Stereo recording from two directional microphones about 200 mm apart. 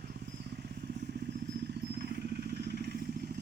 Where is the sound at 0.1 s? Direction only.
55° right (ahead or behind).